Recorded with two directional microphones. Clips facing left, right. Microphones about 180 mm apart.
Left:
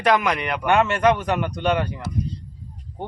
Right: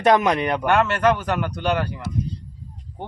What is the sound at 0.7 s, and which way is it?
Speech, centre (ahead or behind).